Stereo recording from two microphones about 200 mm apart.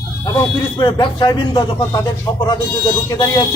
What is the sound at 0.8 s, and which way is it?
Speech, 20° left (ahead or behind).